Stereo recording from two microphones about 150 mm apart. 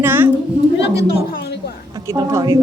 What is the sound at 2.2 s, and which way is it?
Speech, 25° right (ahead or behind).